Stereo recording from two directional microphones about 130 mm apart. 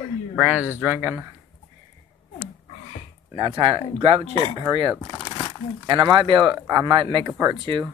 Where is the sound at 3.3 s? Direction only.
40° right (ahead or behind).